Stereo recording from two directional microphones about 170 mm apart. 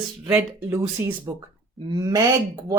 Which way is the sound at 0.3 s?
15° right (ahead or behind).